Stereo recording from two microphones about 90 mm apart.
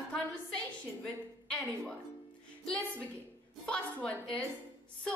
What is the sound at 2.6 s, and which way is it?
A woman's voice, 10° left (ahead or behind).